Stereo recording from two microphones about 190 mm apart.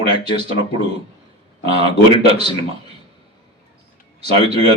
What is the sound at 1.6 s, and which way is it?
Speech, 30° right (ahead or behind).